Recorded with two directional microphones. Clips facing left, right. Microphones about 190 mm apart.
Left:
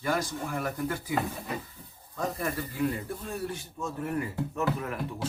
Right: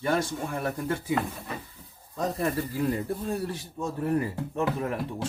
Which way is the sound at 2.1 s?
35° right (ahead or behind).